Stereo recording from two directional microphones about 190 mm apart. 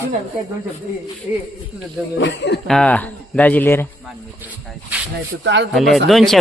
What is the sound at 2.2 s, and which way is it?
Speech, 65° left (ahead or behind).